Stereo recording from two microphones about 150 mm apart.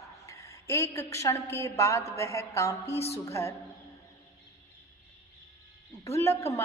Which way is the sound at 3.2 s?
20° left (ahead or behind).